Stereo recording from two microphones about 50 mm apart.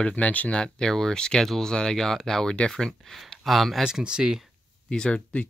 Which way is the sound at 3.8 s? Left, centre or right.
Centre.